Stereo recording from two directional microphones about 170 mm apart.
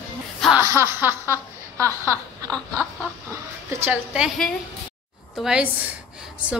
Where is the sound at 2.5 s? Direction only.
5° left (ahead or behind).